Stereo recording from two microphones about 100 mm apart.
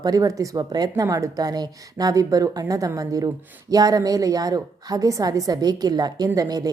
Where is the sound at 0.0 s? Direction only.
40° right (ahead or behind).